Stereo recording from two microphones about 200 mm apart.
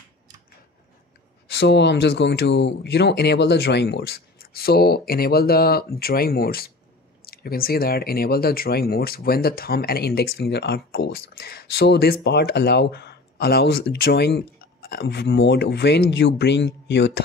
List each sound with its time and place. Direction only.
1.5 s speech: 55° left (ahead or behind)